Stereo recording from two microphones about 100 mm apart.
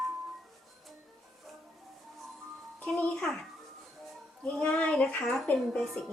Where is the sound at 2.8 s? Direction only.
5° left (ahead or behind).